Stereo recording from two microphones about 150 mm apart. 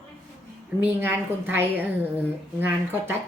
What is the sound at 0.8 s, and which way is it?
A woman's voice, 15° right (ahead or behind).